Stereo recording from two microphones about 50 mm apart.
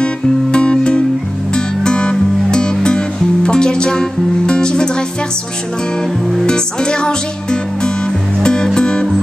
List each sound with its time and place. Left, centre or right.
0.0 s music: centre
6.4 s speech: centre
8.4 s music: centre